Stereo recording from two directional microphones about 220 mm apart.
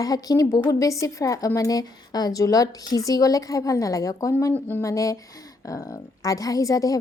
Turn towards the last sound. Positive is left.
turn(degrees=15)  # may be behind; listen again after turning